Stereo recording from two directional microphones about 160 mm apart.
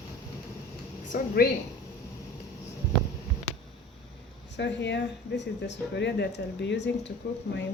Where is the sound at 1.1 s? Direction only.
55° left (ahead or behind).